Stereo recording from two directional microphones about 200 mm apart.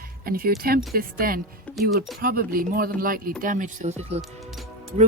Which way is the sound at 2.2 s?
45° right (ahead or behind).